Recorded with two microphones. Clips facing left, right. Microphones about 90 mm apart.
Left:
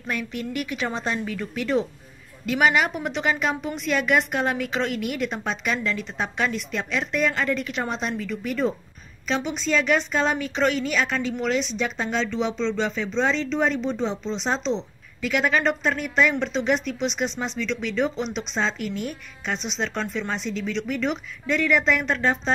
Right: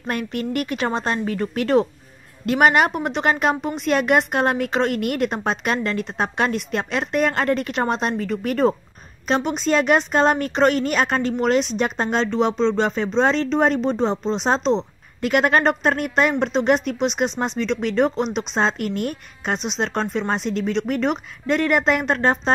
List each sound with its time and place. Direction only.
0.0 s a woman's voice: 50° right (ahead or behind)
14.4 s a woman's voice: 55° right (ahead or behind)